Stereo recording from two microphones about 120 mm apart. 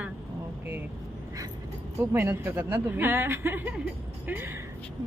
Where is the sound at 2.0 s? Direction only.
20° right (ahead or behind).